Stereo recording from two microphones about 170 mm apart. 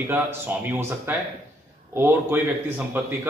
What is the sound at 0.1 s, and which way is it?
Speech, 10° right (ahead or behind).